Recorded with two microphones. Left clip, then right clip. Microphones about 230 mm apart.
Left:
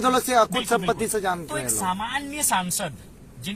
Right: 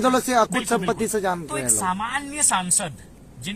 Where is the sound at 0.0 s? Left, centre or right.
Right.